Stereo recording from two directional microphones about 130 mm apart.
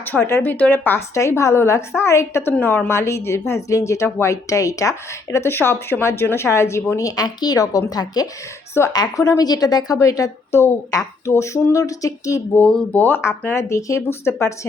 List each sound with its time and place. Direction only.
0.0 s a woman's voice: 15° left (ahead or behind)
12.6 s a woman's voice: 10° left (ahead or behind)